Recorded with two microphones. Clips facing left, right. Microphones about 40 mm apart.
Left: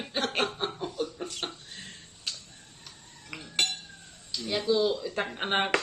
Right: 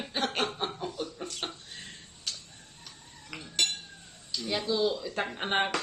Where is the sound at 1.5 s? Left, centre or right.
Centre.